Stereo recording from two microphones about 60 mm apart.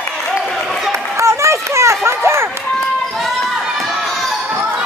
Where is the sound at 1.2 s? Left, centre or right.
Right.